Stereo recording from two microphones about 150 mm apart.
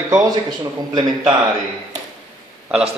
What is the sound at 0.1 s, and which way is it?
Speech, 25° right (ahead or behind).